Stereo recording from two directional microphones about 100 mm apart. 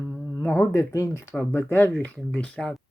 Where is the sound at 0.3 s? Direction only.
20° left (ahead or behind).